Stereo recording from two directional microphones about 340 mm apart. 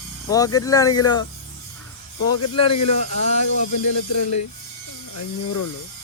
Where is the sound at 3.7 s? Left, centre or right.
Left.